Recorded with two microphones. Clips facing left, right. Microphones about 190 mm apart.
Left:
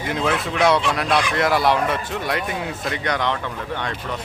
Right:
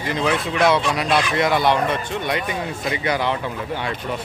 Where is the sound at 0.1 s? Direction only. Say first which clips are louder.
Right 1 dB; centre (ahead or behind).